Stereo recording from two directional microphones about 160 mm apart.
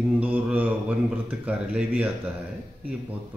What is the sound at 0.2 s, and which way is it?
Mantra, 10° right (ahead or behind).